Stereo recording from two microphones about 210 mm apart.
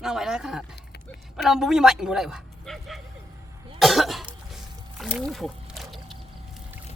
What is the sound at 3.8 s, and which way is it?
Cough, centre (ahead or behind).